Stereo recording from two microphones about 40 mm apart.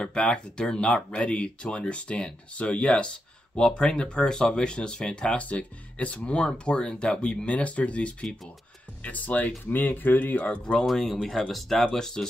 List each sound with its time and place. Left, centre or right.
0.0 s speech: left
5.4 s speech: left
9.0 s speech: left
10.6 s speech: centre